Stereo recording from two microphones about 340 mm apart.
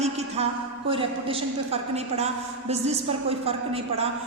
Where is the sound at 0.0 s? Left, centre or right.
Centre.